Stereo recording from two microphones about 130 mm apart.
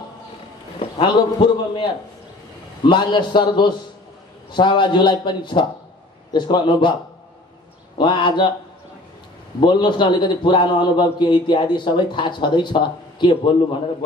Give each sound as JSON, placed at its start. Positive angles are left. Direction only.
{"t": 0.9, "sound": "a man's voice", "side_deg": 35}
{"t": 8.0, "sound": "a man's voice", "side_deg": 35}
{"t": 9.6, "sound": "a man's voice", "side_deg": 35}